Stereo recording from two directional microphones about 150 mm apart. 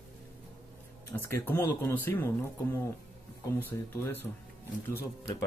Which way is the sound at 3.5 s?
15° left (ahead or behind).